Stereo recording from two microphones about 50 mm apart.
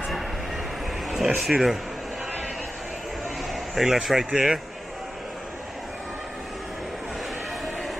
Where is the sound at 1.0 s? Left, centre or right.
Centre.